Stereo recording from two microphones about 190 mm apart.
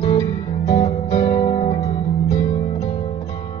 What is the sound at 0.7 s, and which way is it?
Music, 20° left (ahead or behind).